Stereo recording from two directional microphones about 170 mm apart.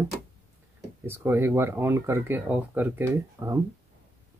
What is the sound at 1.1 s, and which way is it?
Speech, 15° right (ahead or behind).